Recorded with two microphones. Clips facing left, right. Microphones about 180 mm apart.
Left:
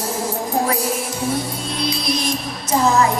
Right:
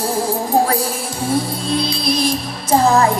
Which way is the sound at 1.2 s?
30° right (ahead or behind).